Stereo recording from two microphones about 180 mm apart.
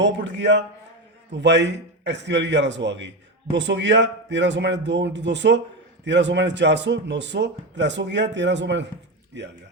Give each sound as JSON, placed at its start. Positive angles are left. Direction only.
{"t": 0.0, "sound": "a man's voice", "side_deg": -85}